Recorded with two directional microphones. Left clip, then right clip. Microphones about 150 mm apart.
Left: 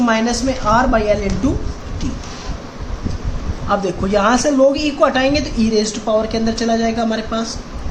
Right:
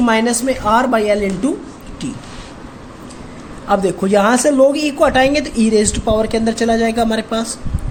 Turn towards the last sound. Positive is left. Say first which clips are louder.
# right 3 dB
turn(degrees=-45)  # may be behind; listen again after turning